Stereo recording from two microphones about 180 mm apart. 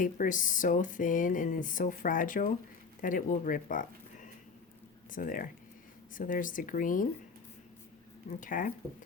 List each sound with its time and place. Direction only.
0.0 s speech: 50° left (ahead or behind)
5.1 s speech: 50° left (ahead or behind)
8.4 s speech: 50° left (ahead or behind)